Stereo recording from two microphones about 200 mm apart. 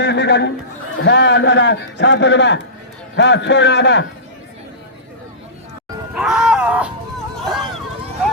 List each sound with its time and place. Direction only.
0.0 s a sound: 60° left (ahead or behind)
1.0 s a man's voice: 60° left (ahead or behind)
6.1 s music: centre (ahead or behind)
7.3 s hubbub: centre (ahead or behind)